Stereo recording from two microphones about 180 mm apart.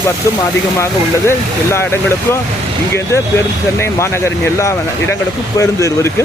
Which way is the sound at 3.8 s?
15° left (ahead or behind).